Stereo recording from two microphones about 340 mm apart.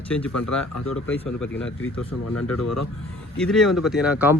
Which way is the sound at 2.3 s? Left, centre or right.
Left.